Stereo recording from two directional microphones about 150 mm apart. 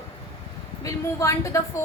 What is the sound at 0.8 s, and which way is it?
A woman's voice, 20° left (ahead or behind).